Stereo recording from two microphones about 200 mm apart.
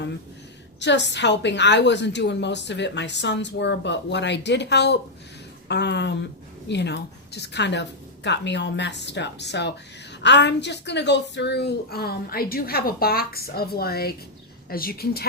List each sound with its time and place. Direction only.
0.8 s a woman's voice: 60° left (ahead or behind)